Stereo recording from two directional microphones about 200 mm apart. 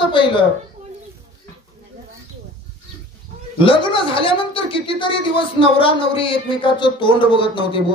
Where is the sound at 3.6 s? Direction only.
25° left (ahead or behind).